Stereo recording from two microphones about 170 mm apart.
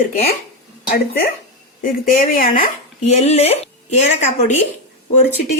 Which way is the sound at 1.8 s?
55° left (ahead or behind).